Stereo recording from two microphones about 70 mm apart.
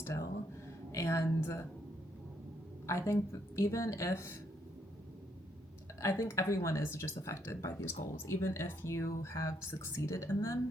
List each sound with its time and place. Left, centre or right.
0.0 s speech: left
2.8 s speech: left
6.0 s speech: left